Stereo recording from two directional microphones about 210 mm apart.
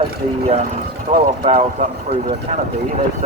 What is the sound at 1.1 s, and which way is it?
Speech, 30° right (ahead or behind).